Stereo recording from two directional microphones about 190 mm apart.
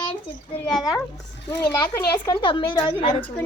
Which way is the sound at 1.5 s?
20° left (ahead or behind).